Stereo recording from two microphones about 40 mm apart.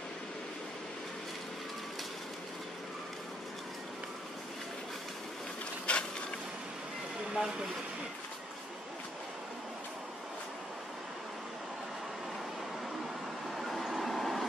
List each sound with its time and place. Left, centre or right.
5.9 s a sound: left
7.3 s speech: centre
13.6 s vehicle: centre